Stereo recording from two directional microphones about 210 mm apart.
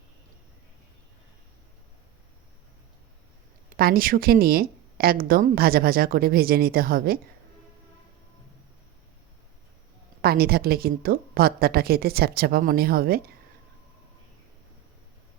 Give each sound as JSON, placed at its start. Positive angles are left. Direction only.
{"t": 3.8, "sound": "a woman's voice", "side_deg": -45}
{"t": 10.2, "sound": "a woman's voice", "side_deg": -45}